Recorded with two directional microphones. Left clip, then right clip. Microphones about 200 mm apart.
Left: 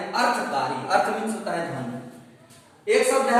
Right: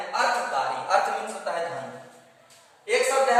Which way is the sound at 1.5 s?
10° right (ahead or behind).